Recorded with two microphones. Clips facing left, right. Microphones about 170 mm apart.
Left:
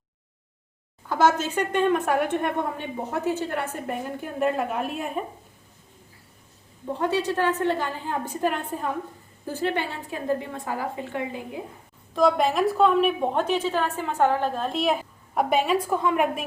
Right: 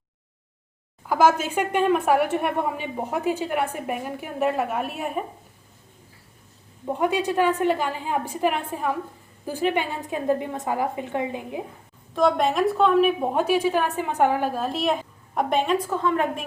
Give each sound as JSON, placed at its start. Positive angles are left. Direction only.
{"t": 1.0, "sound": "speech", "side_deg": -10}
{"t": 7.0, "sound": "a woman's voice", "side_deg": -15}
{"t": 12.1, "sound": "a woman's voice", "side_deg": 0}